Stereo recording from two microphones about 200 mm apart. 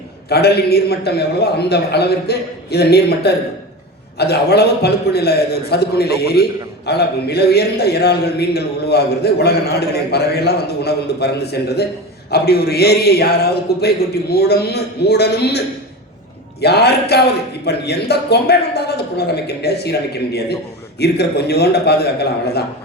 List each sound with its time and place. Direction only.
0.3 s a man's voice: 55° left (ahead or behind)